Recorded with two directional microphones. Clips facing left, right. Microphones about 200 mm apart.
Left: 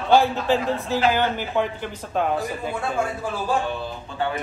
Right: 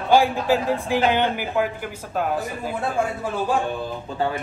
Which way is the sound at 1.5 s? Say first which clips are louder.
Right 1 dB; 5° right (ahead or behind).